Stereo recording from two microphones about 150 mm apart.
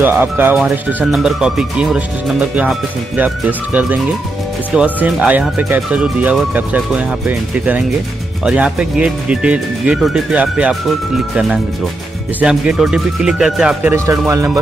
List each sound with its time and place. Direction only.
0.0 s speech: 15° right (ahead or behind)
13.9 s speech: 20° right (ahead or behind)